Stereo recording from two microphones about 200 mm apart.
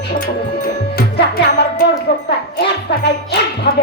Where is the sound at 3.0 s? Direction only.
60° left (ahead or behind).